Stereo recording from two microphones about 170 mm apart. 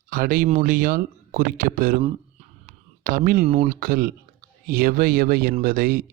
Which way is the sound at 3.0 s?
55° right (ahead or behind).